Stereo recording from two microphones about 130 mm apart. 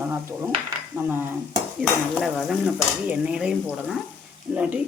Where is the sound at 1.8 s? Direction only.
5° left (ahead or behind).